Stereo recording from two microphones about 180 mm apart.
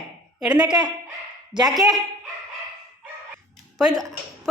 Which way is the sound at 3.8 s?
20° right (ahead or behind).